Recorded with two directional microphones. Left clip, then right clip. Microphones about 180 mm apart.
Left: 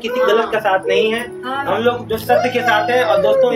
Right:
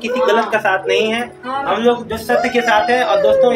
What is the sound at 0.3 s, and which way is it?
Speech, 25° right (ahead or behind).